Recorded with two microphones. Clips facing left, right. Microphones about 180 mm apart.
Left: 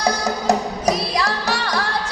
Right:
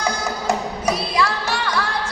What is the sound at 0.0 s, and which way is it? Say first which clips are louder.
Music: left 3 dB; 40° left (ahead or behind).